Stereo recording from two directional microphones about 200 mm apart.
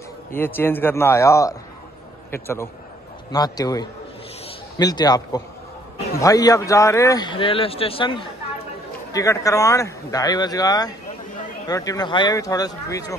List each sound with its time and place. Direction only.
0.3 s speech: 10° left (ahead or behind)